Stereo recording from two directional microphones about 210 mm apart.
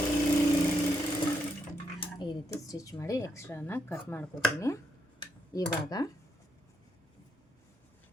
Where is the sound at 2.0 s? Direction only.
20° left (ahead or behind).